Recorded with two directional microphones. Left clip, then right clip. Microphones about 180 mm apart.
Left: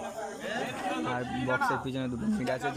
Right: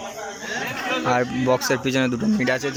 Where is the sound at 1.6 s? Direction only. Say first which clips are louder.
Right 10 dB; 10° right (ahead or behind).